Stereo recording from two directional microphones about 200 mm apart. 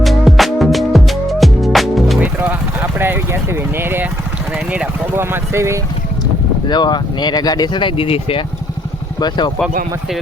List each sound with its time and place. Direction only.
0.0 s music: centre (ahead or behind)
3.0 s a sound: 10° right (ahead or behind)
6.7 s speech: 20° left (ahead or behind)